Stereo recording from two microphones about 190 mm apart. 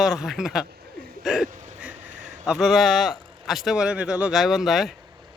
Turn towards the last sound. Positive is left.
turn(degrees=0)  # may be behind; listen again after turning